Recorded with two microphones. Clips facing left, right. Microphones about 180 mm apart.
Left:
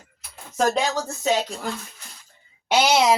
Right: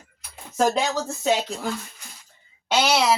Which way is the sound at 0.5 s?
Centre (ahead or behind).